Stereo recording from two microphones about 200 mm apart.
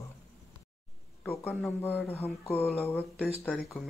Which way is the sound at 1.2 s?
10° left (ahead or behind).